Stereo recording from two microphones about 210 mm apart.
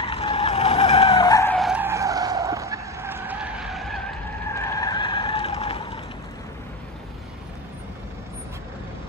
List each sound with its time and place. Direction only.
0.0 s vehicle: 25° left (ahead or behind)
1.6 s skidding: 5° right (ahead or behind)
4.6 s vehicle: 15° left (ahead or behind)